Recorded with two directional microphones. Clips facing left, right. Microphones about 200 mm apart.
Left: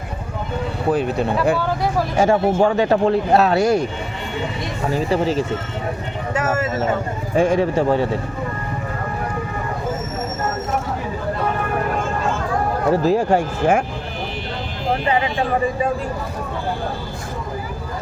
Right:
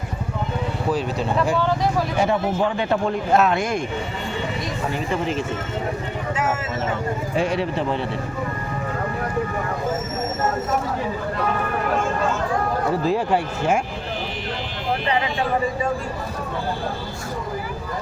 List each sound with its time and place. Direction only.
0.9 s speech: 55° left (ahead or behind)
2.1 s speech: 45° left (ahead or behind)
4.9 s speech: 35° left (ahead or behind)
7.3 s speech: 50° left (ahead or behind)
13.1 s speech: 45° left (ahead or behind)